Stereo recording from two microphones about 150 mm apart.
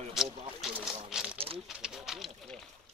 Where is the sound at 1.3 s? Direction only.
40° right (ahead or behind).